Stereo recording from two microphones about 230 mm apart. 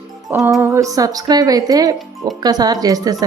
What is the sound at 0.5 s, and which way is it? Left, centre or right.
Speech, centre.